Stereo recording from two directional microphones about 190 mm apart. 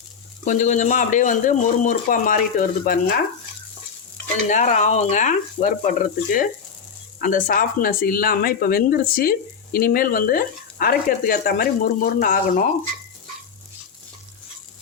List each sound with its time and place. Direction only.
0.4 s speech: 40° left (ahead or behind)
4.4 s speech: 40° left (ahead or behind)